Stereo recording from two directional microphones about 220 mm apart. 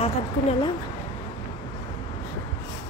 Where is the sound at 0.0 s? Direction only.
25° left (ahead or behind).